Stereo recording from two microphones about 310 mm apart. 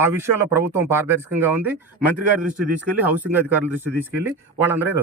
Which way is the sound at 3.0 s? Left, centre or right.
Centre.